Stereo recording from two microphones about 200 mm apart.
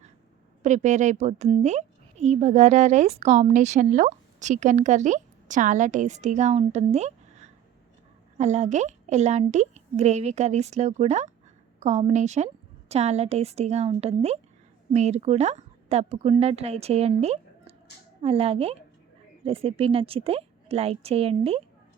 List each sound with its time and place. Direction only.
0.6 s a woman's voice: 35° right (ahead or behind)